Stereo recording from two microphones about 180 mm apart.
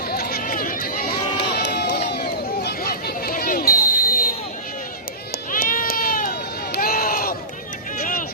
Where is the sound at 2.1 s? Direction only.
60° left (ahead or behind).